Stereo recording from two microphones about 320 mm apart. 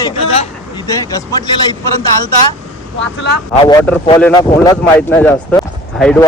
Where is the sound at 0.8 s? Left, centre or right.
Centre.